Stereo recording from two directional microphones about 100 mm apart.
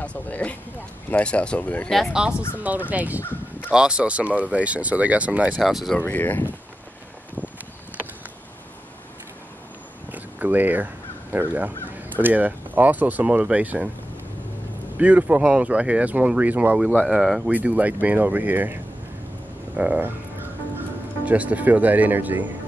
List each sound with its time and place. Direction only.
0.0 s speech: 15° left (ahead or behind)
2.0 s speech: 10° right (ahead or behind)
3.2 s a sound: 20° left (ahead or behind)
3.7 s speech: 10° right (ahead or behind)
5.6 s speech: centre (ahead or behind)
5.9 s speech: 20° left (ahead or behind)
10.0 s a sound: 15° right (ahead or behind)
11.3 s speech: 15° right (ahead or behind)
15.0 s speech: 15° right (ahead or behind)
17.1 s speech: centre (ahead or behind)
17.5 s speech: 15° right (ahead or behind)
19.8 s speech: 10° right (ahead or behind)
21.3 s speech: 15° right (ahead or behind)